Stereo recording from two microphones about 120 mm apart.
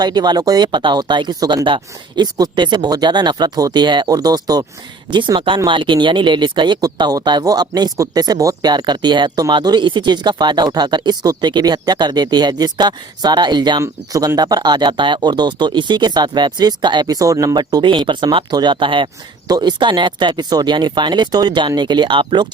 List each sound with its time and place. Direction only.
0.0 s speech: 35° right (ahead or behind)